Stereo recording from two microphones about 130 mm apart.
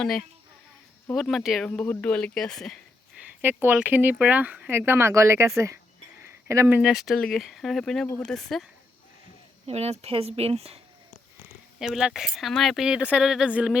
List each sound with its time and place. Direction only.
0.0 s speech: 5° left (ahead or behind)
1.7 s speech: 15° left (ahead or behind)
3.4 s speech: 15° right (ahead or behind)
6.2 s a sound: 20° right (ahead or behind)
6.7 s speech: 5° right (ahead or behind)
9.6 s speech: 55° right (ahead or behind)
11.8 s speech: 5° right (ahead or behind)